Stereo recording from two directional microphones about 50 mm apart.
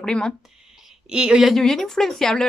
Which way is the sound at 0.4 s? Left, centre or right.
Centre.